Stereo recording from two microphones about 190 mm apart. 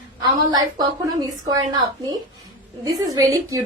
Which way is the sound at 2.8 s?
20° right (ahead or behind).